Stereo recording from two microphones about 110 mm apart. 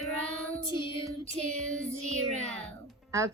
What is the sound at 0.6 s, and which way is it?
Child singing, 45° left (ahead or behind).